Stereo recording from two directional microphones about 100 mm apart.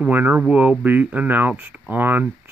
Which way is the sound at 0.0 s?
15° right (ahead or behind).